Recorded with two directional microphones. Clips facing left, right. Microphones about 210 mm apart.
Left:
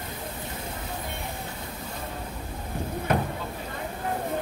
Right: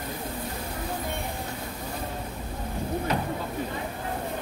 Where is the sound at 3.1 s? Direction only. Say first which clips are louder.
Left 5 dB; 55° left (ahead or behind).